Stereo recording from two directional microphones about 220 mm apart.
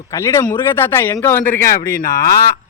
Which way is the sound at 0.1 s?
10° left (ahead or behind).